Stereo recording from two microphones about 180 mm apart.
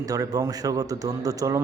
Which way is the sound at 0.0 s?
20° right (ahead or behind).